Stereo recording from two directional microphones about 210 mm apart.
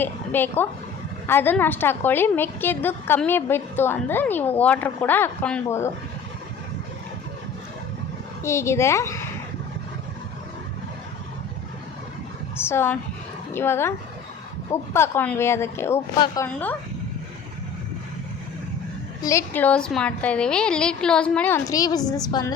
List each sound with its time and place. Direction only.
0.0 s a woman's voice: 10° left (ahead or behind)
8.4 s a woman's voice: 15° left (ahead or behind)
12.5 s a sound: 10° left (ahead or behind)
13.5 s a woman's voice: 10° left (ahead or behind)
19.2 s a woman's voice: 15° left (ahead or behind)